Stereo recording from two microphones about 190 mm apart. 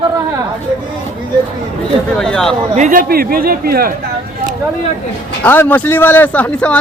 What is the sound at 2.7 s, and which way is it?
Speech, 40° right (ahead or behind).